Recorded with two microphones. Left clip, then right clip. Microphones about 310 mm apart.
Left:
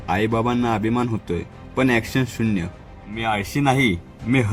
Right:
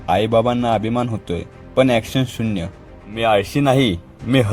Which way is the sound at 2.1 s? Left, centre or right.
Centre.